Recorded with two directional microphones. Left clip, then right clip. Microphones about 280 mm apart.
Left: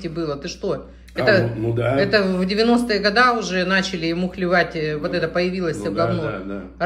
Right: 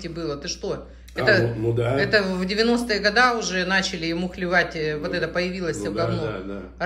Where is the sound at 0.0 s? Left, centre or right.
Centre.